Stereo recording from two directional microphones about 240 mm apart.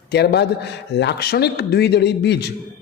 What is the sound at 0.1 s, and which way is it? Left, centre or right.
A man's voice, left.